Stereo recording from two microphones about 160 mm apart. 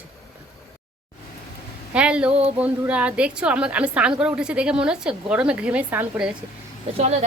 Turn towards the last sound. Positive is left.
turn(degrees=-45)  # may be behind; listen again after turning